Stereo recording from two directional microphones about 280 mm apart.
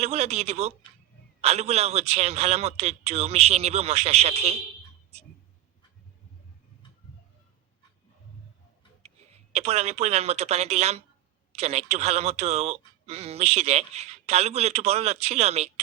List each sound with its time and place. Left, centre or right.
0.0 s speech: right
9.0 s speech: right